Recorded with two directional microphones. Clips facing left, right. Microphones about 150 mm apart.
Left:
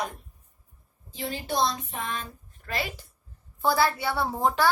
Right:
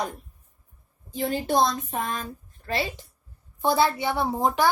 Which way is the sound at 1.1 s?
50° right (ahead or behind).